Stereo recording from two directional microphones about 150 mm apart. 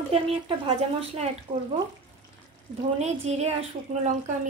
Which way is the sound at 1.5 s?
55° right (ahead or behind).